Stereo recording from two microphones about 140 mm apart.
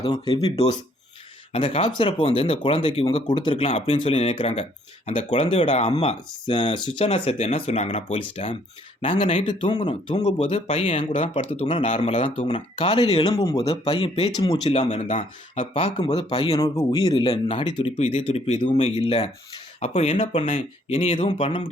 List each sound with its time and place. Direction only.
0.0 s speech: 40° left (ahead or behind)
13.2 s speech: 20° left (ahead or behind)
13.8 s speech: 45° left (ahead or behind)
14.3 s speech: 25° left (ahead or behind)
14.7 s speech: 45° left (ahead or behind)